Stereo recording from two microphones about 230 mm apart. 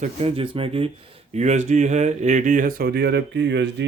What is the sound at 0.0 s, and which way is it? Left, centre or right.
Speech, right.